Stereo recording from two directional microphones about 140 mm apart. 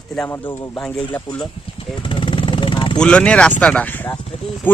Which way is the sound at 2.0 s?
35° left (ahead or behind).